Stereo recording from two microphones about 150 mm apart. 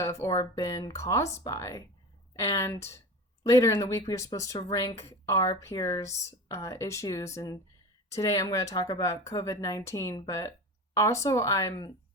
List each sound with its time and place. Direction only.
0.0 s speech: 20° left (ahead or behind)